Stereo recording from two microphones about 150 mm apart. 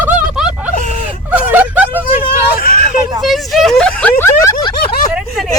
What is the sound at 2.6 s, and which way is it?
Vehicle, 70° left (ahead or behind).